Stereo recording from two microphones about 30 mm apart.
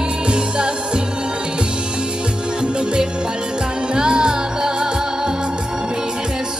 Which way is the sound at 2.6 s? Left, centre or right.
Right.